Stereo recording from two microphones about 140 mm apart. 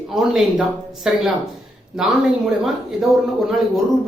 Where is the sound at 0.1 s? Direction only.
5° right (ahead or behind).